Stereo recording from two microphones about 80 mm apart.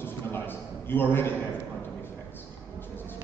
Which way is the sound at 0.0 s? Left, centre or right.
Left.